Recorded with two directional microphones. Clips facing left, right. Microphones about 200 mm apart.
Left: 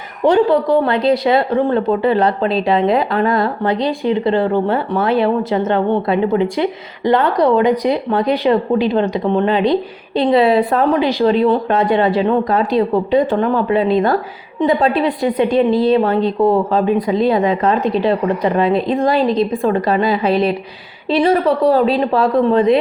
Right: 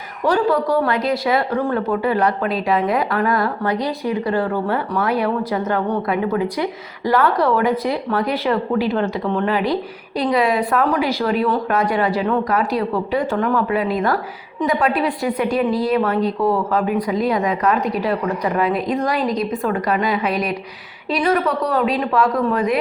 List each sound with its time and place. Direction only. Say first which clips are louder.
0.3 s speech: left 5 dB; 25° left (ahead or behind)